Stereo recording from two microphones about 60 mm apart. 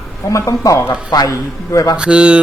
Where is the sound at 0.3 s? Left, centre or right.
Left.